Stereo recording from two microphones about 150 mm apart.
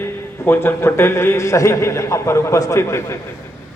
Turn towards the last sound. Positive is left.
turn(degrees=20)  # may be behind; listen again after turning